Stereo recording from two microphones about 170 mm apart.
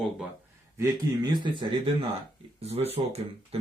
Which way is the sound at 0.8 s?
25° right (ahead or behind).